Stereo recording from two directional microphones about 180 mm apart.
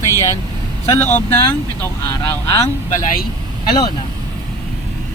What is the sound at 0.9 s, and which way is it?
Speech, 10° left (ahead or behind).